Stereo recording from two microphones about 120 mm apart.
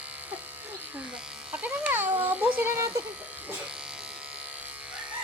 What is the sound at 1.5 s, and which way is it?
Speech, 10° right (ahead or behind).